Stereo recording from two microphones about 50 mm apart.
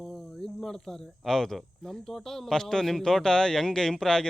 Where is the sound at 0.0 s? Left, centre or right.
Centre.